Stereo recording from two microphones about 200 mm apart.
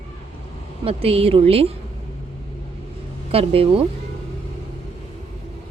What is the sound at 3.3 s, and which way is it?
Speech, 30° right (ahead or behind).